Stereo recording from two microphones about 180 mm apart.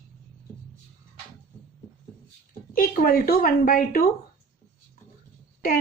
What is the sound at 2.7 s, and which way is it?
A woman's voice, 50° left (ahead or behind).